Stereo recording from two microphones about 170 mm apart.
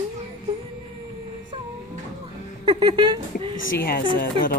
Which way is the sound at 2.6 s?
25° right (ahead or behind).